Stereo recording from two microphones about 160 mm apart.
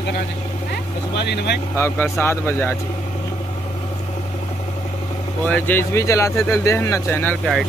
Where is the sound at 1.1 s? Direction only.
90° left.